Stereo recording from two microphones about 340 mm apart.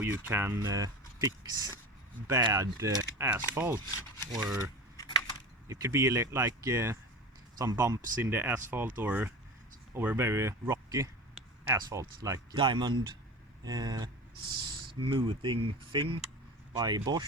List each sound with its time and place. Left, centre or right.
0.0 s speech: centre
5.8 s speech: centre